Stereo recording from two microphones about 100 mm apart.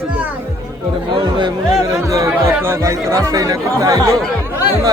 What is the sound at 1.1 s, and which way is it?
Speech, 50° right (ahead or behind).